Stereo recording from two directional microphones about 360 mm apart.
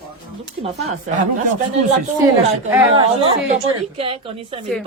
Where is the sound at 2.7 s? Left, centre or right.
Centre.